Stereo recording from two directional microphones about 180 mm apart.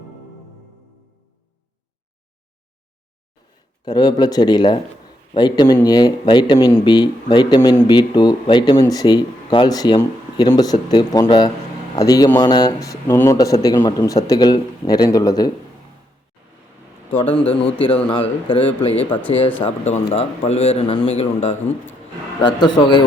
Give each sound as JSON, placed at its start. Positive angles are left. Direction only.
{"t": 3.8, "sound": "speech", "side_deg": 25}
{"t": 17.5, "sound": "a man's voice", "side_deg": 30}
{"t": 22.4, "sound": "speech", "side_deg": 25}